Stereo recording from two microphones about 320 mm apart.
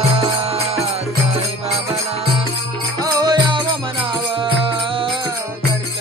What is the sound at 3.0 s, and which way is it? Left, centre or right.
Music, centre.